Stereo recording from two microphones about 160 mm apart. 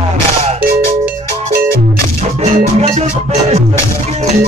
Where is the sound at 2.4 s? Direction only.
40° right (ahead or behind).